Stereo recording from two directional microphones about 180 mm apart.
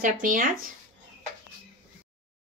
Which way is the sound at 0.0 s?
50° right (ahead or behind).